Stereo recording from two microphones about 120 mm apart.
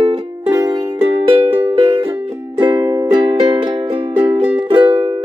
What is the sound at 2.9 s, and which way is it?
Music, 35° right (ahead or behind).